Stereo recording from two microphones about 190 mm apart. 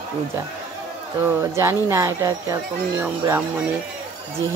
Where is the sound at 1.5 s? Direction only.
15° right (ahead or behind).